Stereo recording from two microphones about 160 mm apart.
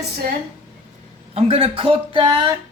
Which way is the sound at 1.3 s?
35° right (ahead or behind).